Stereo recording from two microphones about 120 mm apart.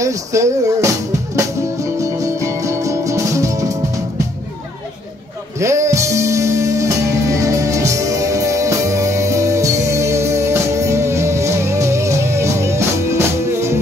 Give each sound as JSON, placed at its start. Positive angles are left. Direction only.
{"t": 0.0, "sound": "speech", "side_deg": -25}
{"t": 1.3, "sound": "music", "side_deg": -25}
{"t": 5.6, "sound": "music", "side_deg": -25}